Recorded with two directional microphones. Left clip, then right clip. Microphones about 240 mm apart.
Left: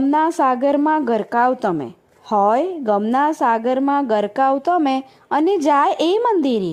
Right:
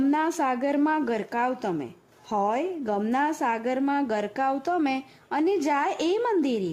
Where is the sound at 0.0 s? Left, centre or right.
Left.